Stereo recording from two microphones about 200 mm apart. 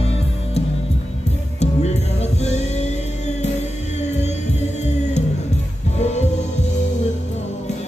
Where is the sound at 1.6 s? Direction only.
35° left (ahead or behind).